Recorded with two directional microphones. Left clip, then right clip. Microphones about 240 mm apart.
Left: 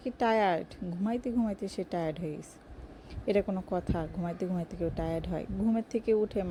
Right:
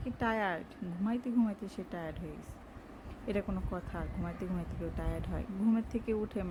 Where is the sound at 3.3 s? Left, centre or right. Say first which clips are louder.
Left 8 dB; centre.